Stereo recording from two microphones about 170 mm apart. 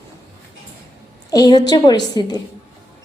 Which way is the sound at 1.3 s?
20° left (ahead or behind).